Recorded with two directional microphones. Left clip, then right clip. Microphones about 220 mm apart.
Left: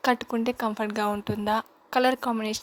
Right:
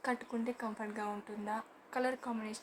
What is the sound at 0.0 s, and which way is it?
Speech, 40° left (ahead or behind).